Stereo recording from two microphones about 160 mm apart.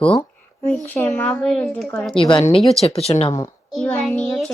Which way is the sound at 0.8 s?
10° left (ahead or behind).